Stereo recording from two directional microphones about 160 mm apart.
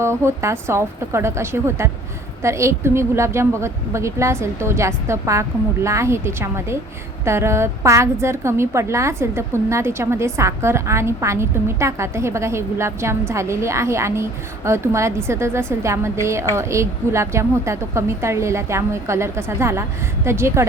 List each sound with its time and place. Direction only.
0.0 s a woman's voice: 15° right (ahead or behind)